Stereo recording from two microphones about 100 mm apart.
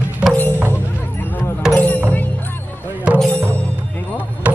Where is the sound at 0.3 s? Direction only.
20° left (ahead or behind).